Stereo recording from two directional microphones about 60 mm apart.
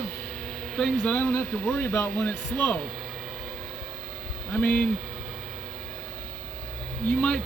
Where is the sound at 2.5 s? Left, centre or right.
Left.